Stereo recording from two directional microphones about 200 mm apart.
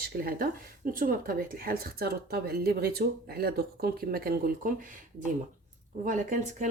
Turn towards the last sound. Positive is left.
turn(degrees=-40)  # may be behind; listen again after turning